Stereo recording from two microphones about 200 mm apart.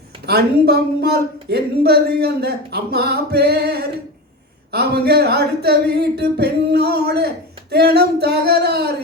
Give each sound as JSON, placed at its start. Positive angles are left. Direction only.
{"t": 0.3, "sound": "speech", "side_deg": -50}